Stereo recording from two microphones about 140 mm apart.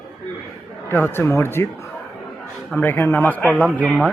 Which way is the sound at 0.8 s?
15° left (ahead or behind).